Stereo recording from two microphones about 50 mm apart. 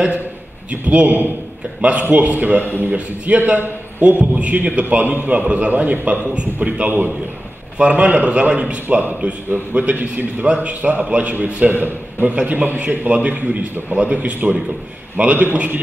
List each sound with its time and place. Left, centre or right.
0.7 s a man's voice: right
4.2 s a man's voice: right